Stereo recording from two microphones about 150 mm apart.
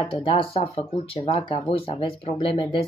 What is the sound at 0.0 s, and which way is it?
Speech, 40° left (ahead or behind).